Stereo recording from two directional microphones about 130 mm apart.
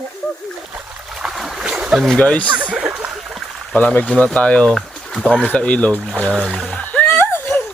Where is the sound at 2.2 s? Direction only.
10° left (ahead or behind).